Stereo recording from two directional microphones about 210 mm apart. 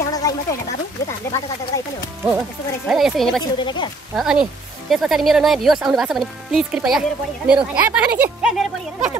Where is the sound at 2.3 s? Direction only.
5° right (ahead or behind).